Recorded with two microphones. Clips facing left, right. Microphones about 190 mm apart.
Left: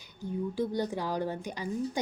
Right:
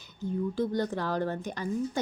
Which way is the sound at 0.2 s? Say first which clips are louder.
Right 2 dB; 10° left (ahead or behind).